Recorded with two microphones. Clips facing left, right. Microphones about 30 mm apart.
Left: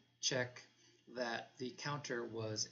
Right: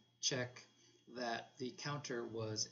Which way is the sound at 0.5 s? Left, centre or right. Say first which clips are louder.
Left 2 dB; centre.